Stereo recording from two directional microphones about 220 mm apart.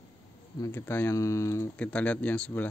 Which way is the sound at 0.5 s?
10° left (ahead or behind).